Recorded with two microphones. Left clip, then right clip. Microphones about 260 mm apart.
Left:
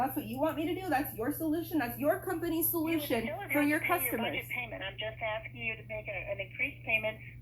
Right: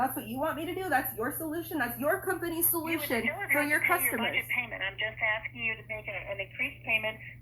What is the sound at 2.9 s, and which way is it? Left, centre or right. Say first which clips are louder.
A woman's voice: right 3 dB; right.